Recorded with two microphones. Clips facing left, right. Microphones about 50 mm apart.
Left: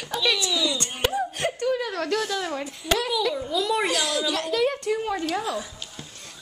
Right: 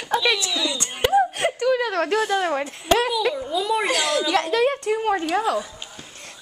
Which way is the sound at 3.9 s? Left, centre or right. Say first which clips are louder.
Right 4 dB; right.